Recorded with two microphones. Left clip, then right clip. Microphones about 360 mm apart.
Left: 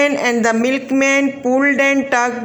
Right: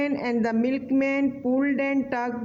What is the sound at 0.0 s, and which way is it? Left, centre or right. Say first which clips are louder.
A man's voice: left 11 dB; right.